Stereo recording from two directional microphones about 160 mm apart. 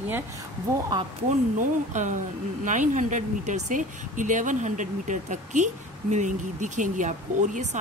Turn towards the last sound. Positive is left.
turn(degrees=-50)  # may be behind; listen again after turning